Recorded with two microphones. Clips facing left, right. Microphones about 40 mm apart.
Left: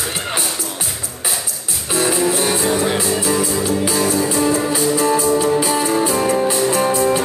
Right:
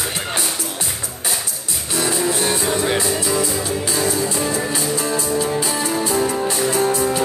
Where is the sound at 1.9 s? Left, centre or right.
Centre.